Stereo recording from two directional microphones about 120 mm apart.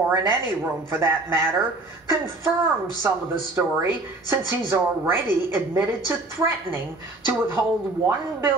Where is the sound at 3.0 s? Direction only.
20° right (ahead or behind).